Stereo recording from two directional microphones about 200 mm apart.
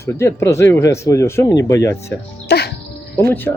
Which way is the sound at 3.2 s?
10° left (ahead or behind).